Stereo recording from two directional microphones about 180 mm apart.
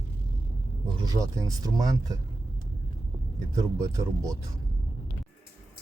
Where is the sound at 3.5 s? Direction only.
20° right (ahead or behind).